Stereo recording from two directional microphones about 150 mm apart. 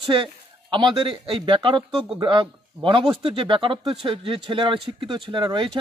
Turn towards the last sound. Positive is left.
turn(degrees=-30)  # may be behind; listen again after turning